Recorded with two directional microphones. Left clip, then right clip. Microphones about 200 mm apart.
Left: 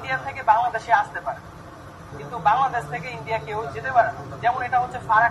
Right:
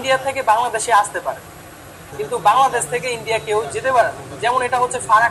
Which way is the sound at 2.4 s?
45° right (ahead or behind).